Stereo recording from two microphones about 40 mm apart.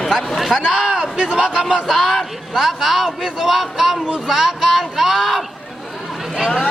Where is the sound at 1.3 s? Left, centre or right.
Right.